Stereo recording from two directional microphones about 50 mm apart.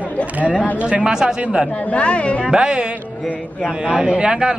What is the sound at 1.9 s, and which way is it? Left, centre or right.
Speech, left.